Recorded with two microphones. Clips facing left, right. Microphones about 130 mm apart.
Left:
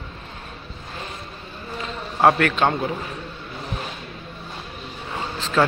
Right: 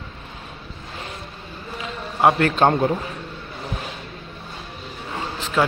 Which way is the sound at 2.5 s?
40° right (ahead or behind).